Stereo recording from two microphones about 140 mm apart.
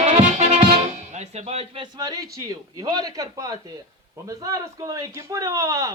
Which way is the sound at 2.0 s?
25° right (ahead or behind).